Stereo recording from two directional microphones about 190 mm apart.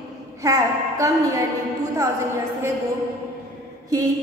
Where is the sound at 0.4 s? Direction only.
15° right (ahead or behind).